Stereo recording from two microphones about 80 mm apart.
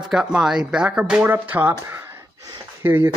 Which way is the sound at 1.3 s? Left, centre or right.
Right.